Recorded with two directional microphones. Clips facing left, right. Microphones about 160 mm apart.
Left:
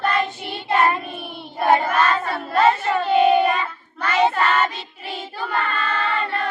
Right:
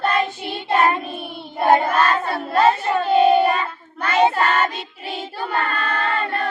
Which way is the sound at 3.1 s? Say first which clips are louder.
Right 1 dB; 35° right (ahead or behind).